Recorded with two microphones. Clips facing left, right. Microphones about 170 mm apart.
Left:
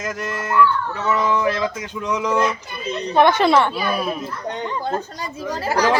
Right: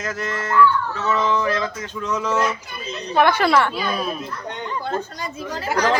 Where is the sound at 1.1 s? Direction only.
10° left (ahead or behind).